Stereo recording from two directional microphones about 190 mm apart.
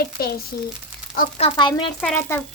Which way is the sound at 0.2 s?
55° left (ahead or behind).